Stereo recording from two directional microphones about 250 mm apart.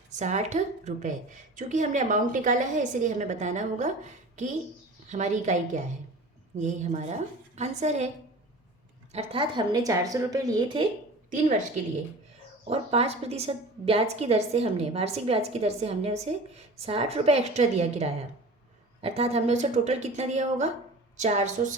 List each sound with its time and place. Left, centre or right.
0.2 s a woman's voice: right
9.1 s a woman's voice: right
11.3 s a woman's voice: right
12.6 s a woman's voice: right